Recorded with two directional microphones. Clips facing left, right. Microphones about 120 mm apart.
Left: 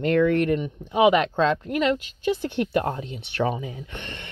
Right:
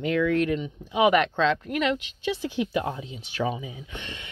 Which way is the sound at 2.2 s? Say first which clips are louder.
Left 3 dB; 50° left (ahead or behind).